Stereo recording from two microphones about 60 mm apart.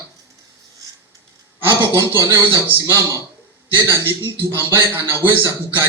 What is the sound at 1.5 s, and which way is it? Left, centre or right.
A man's voice, right.